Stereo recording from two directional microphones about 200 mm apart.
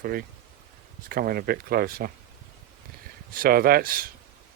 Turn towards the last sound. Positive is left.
turn(degrees=-45)  # may be behind; listen again after turning